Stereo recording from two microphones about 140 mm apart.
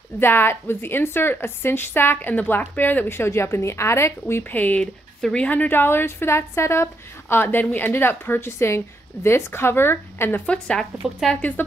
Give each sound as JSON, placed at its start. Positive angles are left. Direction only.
{"t": 0.2, "sound": "a woman's voice", "side_deg": 15}